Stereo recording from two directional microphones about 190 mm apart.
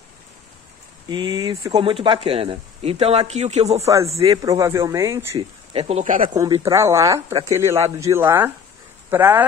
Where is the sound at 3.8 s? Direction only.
15° right (ahead or behind).